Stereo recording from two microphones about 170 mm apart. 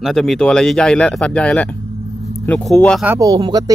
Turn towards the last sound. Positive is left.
turn(degrees=-25)  # may be behind; listen again after turning